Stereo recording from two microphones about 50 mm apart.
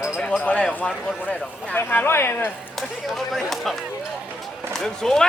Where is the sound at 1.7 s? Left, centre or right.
Left.